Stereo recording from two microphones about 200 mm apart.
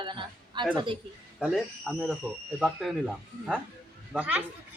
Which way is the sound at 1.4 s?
Centre (ahead or behind).